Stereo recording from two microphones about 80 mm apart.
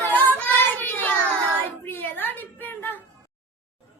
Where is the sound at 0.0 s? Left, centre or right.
Centre.